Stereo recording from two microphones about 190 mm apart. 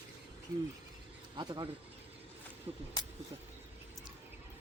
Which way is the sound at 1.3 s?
25° right (ahead or behind).